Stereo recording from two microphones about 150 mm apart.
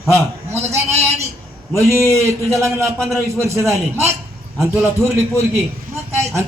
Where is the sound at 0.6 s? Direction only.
45° right (ahead or behind).